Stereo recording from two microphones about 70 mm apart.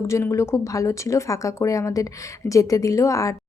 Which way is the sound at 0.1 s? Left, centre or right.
Left.